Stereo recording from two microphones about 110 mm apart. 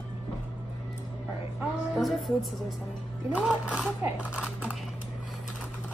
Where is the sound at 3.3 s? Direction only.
5° right (ahead or behind).